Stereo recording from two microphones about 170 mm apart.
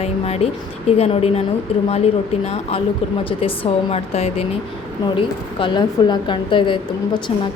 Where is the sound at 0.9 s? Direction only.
35° left (ahead or behind).